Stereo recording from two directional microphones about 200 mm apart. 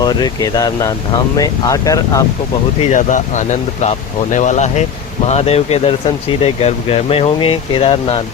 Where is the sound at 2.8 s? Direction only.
40° left (ahead or behind).